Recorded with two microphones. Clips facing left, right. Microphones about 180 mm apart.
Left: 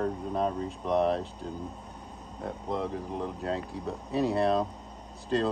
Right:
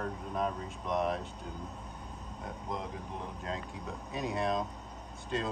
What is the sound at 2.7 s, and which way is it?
Speech, 35° left (ahead or behind).